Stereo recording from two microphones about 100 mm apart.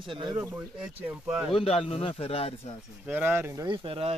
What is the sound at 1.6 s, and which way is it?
Speech, 75° left (ahead or behind).